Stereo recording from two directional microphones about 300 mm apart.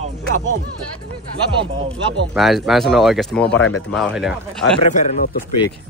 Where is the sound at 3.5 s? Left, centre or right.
Left.